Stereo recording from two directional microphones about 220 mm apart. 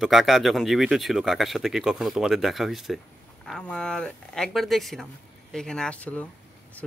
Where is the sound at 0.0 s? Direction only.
Centre (ahead or behind).